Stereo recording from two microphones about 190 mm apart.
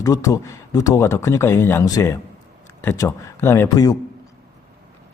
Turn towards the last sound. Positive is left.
turn(degrees=20)  # may be behind; listen again after turning